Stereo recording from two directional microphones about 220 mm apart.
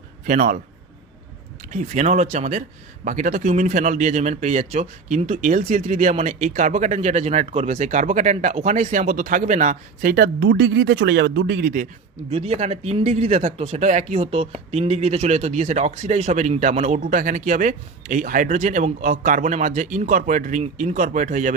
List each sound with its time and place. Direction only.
0.3 s speech: 35° right (ahead or behind)
1.7 s speech: 35° right (ahead or behind)
12.3 s speech: 30° right (ahead or behind)